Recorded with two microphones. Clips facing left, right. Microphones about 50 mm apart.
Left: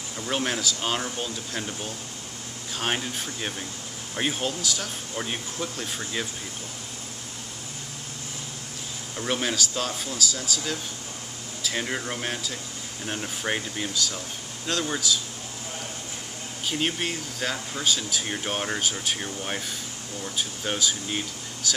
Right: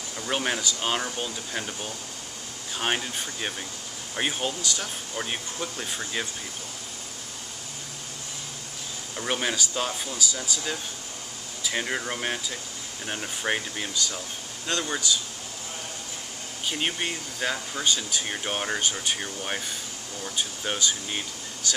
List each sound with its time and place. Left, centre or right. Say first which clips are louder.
0.3 s speech: even; centre
9.1 s speech: left 1 dB; centre
16.6 s speech: left 1 dB; centre